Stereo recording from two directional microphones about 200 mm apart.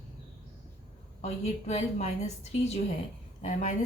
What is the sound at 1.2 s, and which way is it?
A woman's voice, 30° left (ahead or behind).